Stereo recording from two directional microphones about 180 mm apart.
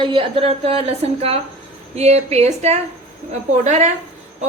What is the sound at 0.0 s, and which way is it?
A woman's voice, 30° right (ahead or behind).